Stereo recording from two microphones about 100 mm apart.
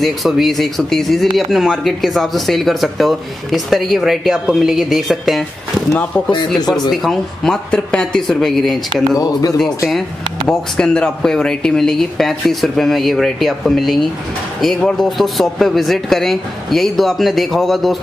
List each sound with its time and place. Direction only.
0.0 s speech: centre (ahead or behind)
5.9 s speech: 10° left (ahead or behind)
6.7 s speech: centre (ahead or behind)
9.1 s speech: 40° left (ahead or behind)
10.5 s speech: 10° left (ahead or behind)